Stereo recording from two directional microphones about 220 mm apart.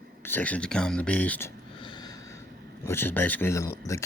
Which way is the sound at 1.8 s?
20° left (ahead or behind).